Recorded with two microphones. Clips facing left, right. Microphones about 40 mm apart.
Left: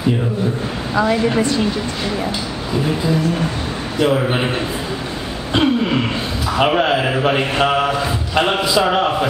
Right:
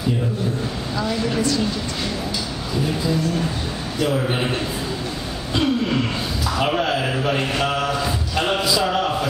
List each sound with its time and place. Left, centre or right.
0.9 s speech: left
4.0 s speech: left
5.5 s speech: left